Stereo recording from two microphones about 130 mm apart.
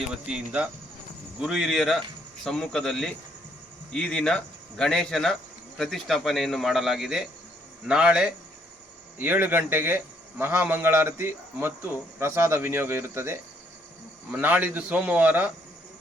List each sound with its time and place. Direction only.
0.1 s a man's voice: 5° right (ahead or behind)